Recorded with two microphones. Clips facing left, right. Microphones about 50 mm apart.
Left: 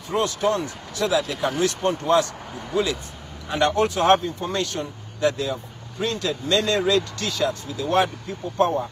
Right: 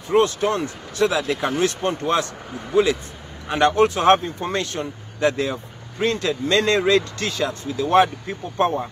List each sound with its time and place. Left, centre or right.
0.1 s speech: right